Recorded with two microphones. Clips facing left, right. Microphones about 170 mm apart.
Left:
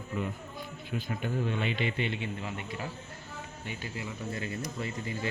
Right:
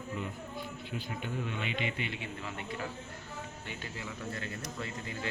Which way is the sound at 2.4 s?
15° left (ahead or behind).